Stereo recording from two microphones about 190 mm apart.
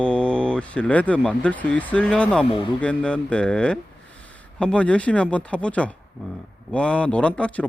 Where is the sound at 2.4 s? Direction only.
25° left (ahead or behind).